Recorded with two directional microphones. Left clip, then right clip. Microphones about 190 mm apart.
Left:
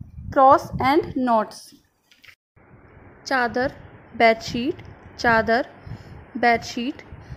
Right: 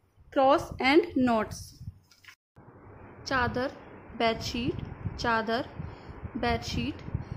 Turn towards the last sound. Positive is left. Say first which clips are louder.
# left 9 dB
turn(degrees=20)  # may be behind; listen again after turning